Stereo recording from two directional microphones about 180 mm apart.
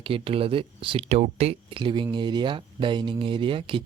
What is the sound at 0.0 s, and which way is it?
Speech, 30° right (ahead or behind).